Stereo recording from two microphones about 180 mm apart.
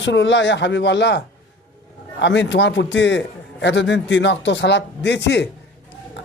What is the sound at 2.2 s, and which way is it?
Speech, 85° left.